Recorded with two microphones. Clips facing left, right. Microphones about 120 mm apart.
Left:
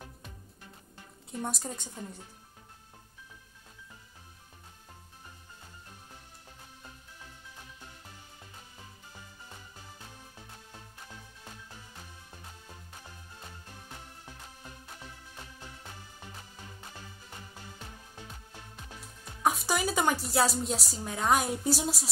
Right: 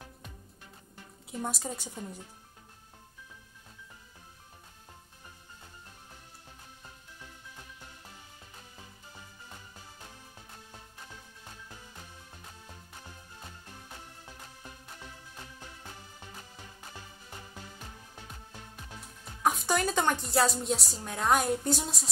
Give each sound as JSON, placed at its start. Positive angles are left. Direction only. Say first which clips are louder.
{"t": 1.4, "sound": "a woman's voice", "louder": "right 1 dB", "side_deg": 0}
{"t": 19.4, "sound": "a woman's voice", "louder": "right 1 dB", "side_deg": 0}